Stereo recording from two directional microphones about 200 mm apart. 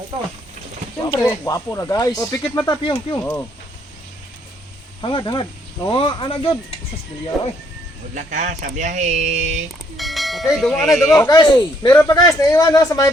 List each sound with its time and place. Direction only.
0.9 s speech: 20° left (ahead or behind)
4.9 s a man's voice: 25° left (ahead or behind)
7.3 s speech: centre (ahead or behind)
8.1 s speech: 35° right (ahead or behind)
10.0 s bell: centre (ahead or behind)
11.1 s a man's voice: 15° left (ahead or behind)